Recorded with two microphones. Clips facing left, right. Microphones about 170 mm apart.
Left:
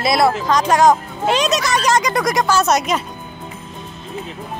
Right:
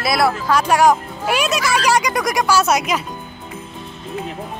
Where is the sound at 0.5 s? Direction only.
10° right (ahead or behind).